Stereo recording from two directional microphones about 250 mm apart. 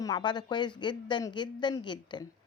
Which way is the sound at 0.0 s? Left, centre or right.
Centre.